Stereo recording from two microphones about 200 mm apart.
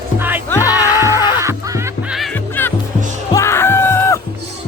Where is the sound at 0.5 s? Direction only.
15° left (ahead or behind).